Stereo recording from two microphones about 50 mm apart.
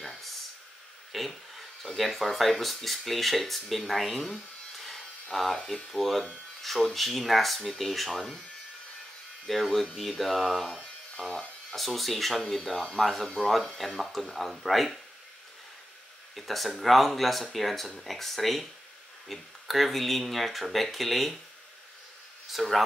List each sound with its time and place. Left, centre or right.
1.1 s speech: centre
9.5 s speech: centre
10.7 s a sound: centre
11.7 s speech: centre
16.3 s speech: centre
22.5 s speech: centre